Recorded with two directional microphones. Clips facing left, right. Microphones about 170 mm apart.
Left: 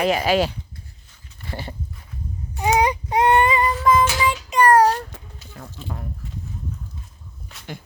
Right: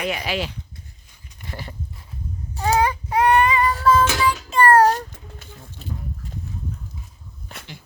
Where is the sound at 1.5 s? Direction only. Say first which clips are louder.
Left 3 dB; 25° left (ahead or behind).